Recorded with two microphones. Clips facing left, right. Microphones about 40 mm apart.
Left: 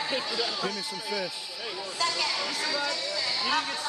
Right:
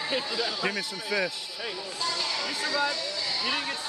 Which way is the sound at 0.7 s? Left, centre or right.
Right.